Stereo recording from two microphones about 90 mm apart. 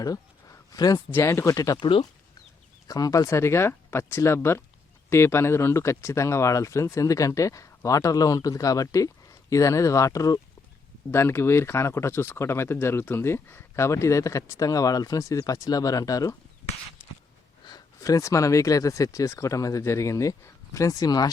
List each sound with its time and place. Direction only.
0.0 s speech: 40° left (ahead or behind)
1.1 s speech: 30° left (ahead or behind)
1.8 s speech: 75° left (ahead or behind)
2.8 s speech: 45° left (ahead or behind)
11.1 s speech: 30° left (ahead or behind)
17.7 s speech: 45° left (ahead or behind)